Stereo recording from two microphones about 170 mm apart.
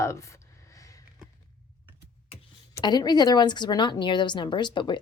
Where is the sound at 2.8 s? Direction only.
25° left (ahead or behind).